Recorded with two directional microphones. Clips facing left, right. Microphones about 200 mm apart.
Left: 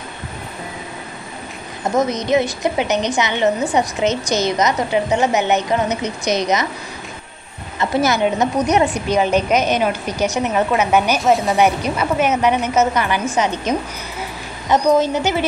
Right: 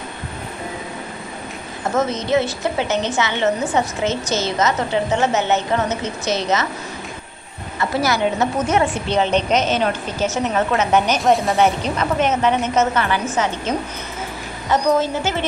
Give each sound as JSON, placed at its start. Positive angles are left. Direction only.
{"t": 2.0, "sound": "a woman's voice", "side_deg": 15}
{"t": 7.8, "sound": "a woman's voice", "side_deg": 20}
{"t": 11.5, "sound": "a woman's voice", "side_deg": 10}